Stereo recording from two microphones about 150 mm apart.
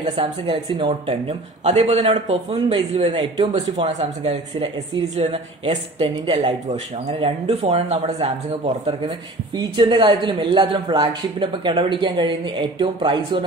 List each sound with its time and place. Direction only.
0.0 s a man's voice: 35° right (ahead or behind)
6.0 s speech: 30° right (ahead or behind)
6.7 s a man's voice: 45° right (ahead or behind)